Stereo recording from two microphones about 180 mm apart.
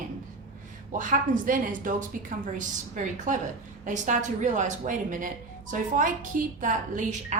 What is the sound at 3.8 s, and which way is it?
A woman's voice, 45° right (ahead or behind).